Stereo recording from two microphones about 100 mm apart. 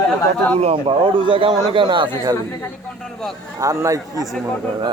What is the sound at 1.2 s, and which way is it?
Speech, 60° right (ahead or behind).